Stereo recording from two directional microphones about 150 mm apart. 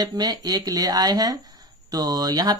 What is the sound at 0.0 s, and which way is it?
Speech, 25° right (ahead or behind).